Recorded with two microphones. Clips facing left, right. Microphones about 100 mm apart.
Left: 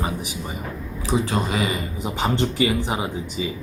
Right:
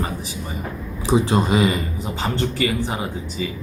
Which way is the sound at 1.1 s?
25° right (ahead or behind).